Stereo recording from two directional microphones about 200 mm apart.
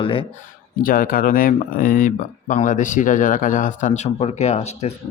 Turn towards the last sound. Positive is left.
turn(degrees=35)  # may be behind; listen again after turning